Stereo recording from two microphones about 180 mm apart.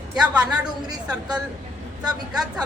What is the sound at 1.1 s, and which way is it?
Speech, 5° right (ahead or behind).